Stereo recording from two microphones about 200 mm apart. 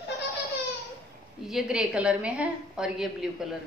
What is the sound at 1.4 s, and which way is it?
A woman's voice, 5° right (ahead or behind).